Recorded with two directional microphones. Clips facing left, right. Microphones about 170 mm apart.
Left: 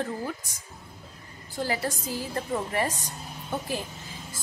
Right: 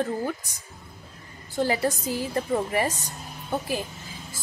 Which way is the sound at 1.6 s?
20° right (ahead or behind).